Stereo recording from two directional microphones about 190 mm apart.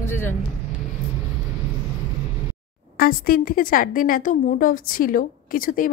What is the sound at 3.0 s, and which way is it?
A woman's voice, 50° left (ahead or behind).